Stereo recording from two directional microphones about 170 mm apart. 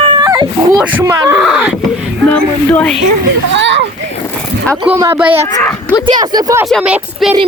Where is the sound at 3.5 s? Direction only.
90° right.